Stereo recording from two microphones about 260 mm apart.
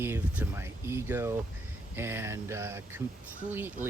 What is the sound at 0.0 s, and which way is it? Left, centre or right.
Speech, centre.